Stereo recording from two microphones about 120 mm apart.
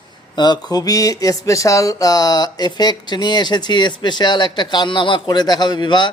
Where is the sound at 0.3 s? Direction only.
35° left (ahead or behind).